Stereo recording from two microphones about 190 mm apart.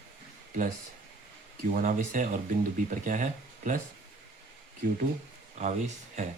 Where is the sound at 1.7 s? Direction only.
45° right (ahead or behind).